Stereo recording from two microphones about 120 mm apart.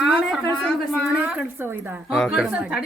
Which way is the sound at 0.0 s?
Centre (ahead or behind).